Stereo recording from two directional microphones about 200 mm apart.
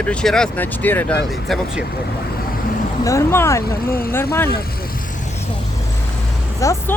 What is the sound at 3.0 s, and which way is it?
Speech, 15° left (ahead or behind).